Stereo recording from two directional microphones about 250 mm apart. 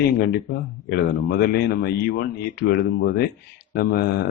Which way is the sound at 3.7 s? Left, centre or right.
Left.